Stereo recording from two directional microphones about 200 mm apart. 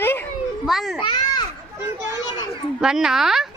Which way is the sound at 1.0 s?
25° left (ahead or behind).